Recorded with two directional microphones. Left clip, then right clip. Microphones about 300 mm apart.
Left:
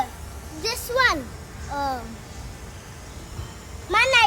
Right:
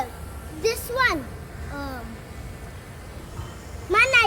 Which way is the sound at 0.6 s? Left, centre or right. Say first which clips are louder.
Left 1 dB; centre.